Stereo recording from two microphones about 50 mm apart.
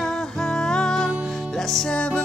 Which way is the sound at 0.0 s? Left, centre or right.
Centre.